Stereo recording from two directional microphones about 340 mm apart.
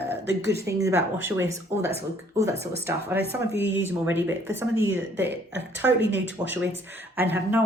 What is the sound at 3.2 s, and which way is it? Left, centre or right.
Speech, right.